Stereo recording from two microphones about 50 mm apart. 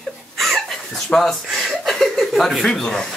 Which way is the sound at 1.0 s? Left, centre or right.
Centre.